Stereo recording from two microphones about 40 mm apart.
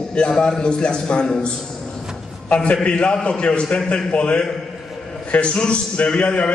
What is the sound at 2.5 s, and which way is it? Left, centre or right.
A man's voice, left.